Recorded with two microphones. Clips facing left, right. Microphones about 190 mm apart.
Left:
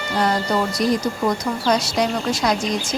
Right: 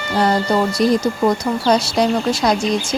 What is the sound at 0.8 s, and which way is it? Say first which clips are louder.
Speech: right 4 dB; 30° right (ahead or behind).